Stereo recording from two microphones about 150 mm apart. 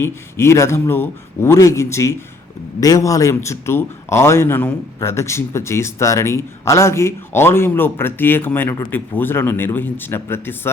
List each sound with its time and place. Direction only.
0.0 s a man's voice: 15° left (ahead or behind)